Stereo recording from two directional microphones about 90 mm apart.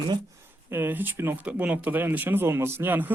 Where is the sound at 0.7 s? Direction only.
25° right (ahead or behind).